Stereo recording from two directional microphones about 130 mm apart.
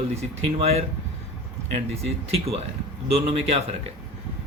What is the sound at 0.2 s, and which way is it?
Speech, 55° right (ahead or behind).